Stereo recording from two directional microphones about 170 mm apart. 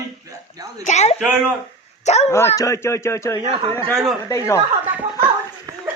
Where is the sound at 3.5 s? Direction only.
35° right (ahead or behind).